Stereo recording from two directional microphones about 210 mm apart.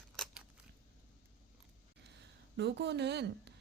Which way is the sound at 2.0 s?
55° right (ahead or behind).